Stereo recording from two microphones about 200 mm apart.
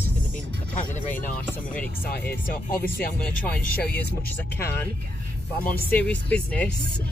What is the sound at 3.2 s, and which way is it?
Speech, 5° left (ahead or behind).